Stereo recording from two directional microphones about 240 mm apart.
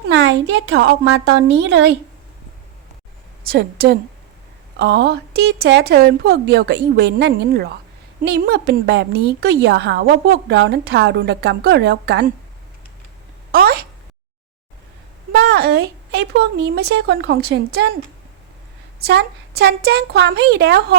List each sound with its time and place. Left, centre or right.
0.1 s a woman's voice: right
3.4 s a woman's voice: right
13.5 s a woman's voice: right
15.3 s a woman's voice: right
18.9 s a woman's voice: right